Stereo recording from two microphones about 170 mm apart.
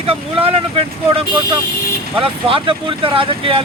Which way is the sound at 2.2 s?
30° right (ahead or behind).